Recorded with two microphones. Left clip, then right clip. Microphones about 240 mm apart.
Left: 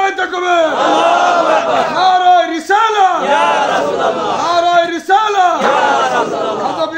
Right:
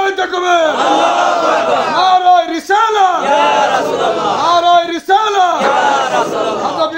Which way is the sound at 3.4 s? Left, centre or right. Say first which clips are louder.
Right 1 dB; right.